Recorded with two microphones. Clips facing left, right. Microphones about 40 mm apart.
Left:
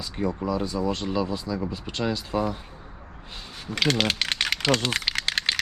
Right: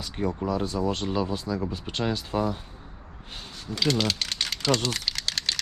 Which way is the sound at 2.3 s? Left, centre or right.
Left.